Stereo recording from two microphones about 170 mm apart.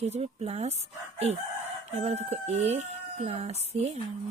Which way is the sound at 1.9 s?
40° right (ahead or behind).